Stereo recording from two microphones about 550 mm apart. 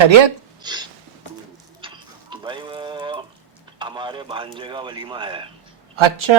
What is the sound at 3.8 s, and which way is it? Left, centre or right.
A man's voice, centre.